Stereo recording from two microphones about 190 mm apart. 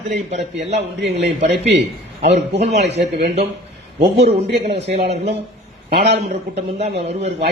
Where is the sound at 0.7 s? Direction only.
65° right (ahead or behind).